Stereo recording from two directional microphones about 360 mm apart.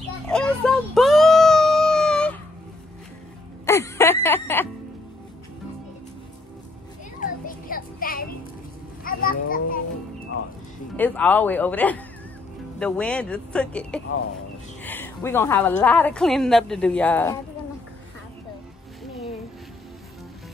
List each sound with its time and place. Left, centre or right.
0.3 s a sound: centre
3.6 s music: centre
7.2 s a sound: left
9.0 s children playing: left
11.0 s a woman's voice: centre
19.0 s music: centre